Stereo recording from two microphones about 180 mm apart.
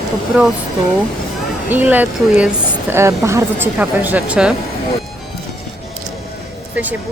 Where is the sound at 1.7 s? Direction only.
10° right (ahead or behind).